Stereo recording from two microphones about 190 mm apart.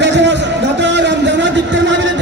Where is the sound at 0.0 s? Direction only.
65° right (ahead or behind).